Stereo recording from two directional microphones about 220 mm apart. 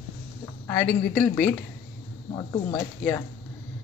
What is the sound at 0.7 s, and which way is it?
A woman's voice, 5° left (ahead or behind).